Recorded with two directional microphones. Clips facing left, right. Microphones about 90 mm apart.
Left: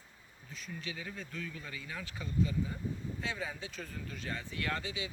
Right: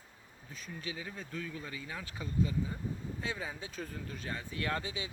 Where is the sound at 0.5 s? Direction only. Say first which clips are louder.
Right 1 dB; 40° right (ahead or behind).